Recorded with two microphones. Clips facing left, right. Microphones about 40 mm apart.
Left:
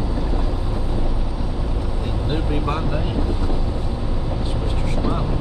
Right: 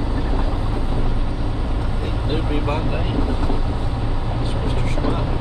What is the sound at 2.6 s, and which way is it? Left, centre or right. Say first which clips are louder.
Vehicle: right 1 dB; centre.